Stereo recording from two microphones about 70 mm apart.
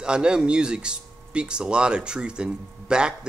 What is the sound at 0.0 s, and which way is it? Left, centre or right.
Speech, centre.